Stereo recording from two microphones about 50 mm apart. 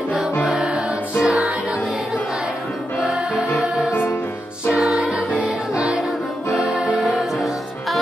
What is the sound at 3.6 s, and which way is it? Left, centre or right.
Music, centre.